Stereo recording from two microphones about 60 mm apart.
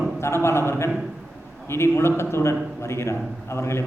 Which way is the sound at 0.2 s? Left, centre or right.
Left.